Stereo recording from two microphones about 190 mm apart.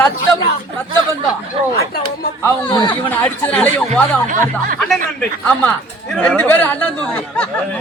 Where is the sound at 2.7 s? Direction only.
25° left (ahead or behind).